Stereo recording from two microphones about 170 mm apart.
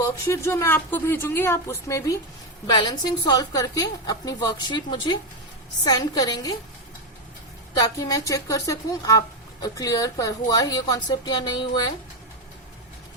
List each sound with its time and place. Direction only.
0.0 s a woman's voice: 15° left (ahead or behind)
7.8 s a woman's voice: 20° left (ahead or behind)